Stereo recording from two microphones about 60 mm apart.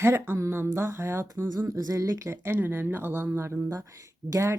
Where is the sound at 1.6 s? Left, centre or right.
Right.